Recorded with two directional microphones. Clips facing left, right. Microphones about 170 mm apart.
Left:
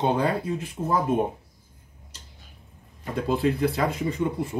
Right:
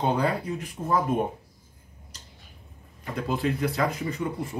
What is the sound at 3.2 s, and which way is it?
Speech, 30° left (ahead or behind).